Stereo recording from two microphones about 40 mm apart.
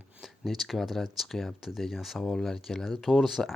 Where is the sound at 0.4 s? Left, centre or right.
Centre.